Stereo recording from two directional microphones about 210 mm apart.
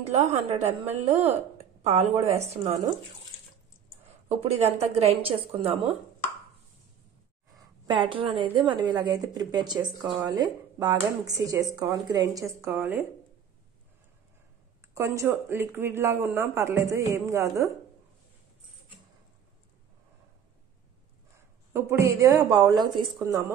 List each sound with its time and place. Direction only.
0.1 s a woman's voice: 30° right (ahead or behind)
4.9 s speech: 30° right (ahead or behind)
7.8 s a woman's voice: 20° right (ahead or behind)
15.0 s speech: 10° right (ahead or behind)
21.7 s speech: 15° right (ahead or behind)